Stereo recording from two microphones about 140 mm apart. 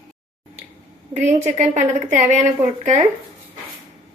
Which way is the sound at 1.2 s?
60° right (ahead or behind).